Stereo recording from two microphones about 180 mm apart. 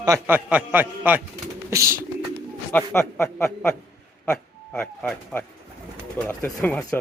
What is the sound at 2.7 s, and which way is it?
A man's voice, 15° left (ahead or behind).